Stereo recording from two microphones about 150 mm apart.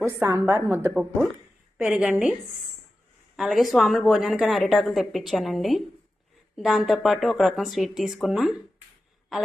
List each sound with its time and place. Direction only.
0.0 s a woman's voice: 20° right (ahead or behind)
3.3 s a woman's voice: centre (ahead or behind)